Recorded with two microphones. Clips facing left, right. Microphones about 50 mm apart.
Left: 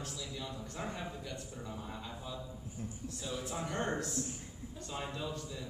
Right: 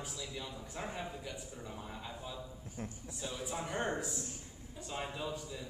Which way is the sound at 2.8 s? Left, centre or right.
Right.